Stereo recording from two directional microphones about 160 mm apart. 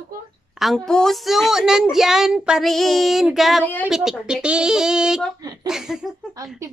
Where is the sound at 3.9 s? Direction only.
5° right (ahead or behind).